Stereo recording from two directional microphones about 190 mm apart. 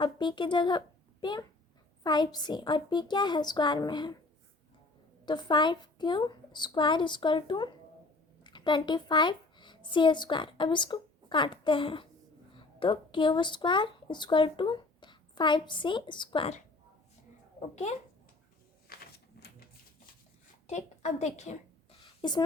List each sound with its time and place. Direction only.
0.0 s a woman's voice: 25° left (ahead or behind)
5.2 s a woman's voice: 25° left (ahead or behind)
18.9 s a sound: 55° left (ahead or behind)
20.7 s a woman's voice: 35° left (ahead or behind)
22.0 s whispering: 25° left (ahead or behind)